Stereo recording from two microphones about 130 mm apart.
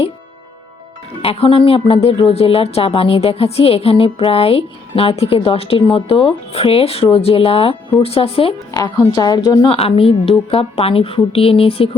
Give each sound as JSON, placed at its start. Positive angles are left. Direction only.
{"t": 1.2, "sound": "speech", "side_deg": 45}
{"t": 8.7, "sound": "a woman's voice", "side_deg": 30}
{"t": 9.7, "sound": "speech", "side_deg": 45}